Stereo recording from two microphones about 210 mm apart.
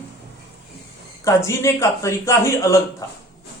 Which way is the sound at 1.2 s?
15° left (ahead or behind).